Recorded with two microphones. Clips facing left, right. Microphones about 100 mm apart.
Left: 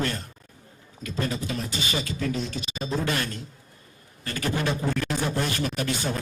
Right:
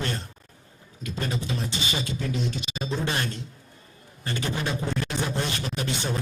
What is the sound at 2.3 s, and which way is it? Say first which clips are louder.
Speech: even; 40° left (ahead or behind).